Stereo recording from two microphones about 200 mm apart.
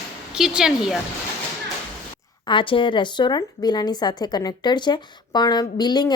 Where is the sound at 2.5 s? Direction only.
25° left (ahead or behind).